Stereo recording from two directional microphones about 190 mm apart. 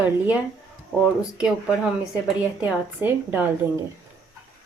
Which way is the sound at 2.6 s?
10° right (ahead or behind).